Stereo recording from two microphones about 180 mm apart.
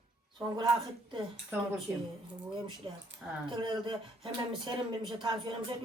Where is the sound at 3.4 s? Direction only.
25° right (ahead or behind).